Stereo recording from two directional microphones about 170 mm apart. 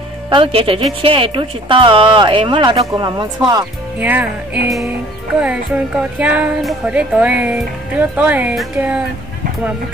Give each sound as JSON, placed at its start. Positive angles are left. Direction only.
{"t": 0.3, "sound": "speech", "side_deg": -30}
{"t": 4.0, "sound": "speech", "side_deg": -10}
{"t": 5.4, "sound": "speech", "side_deg": -10}